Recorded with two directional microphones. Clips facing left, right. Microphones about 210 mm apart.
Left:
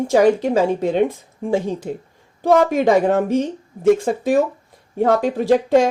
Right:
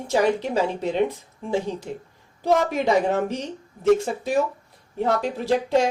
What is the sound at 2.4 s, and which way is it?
Speech, 50° left (ahead or behind).